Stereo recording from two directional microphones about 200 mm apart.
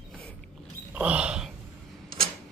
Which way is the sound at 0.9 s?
5° right (ahead or behind).